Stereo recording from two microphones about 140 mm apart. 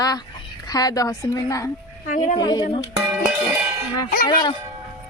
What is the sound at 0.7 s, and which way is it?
A woman's voice, 25° left (ahead or behind).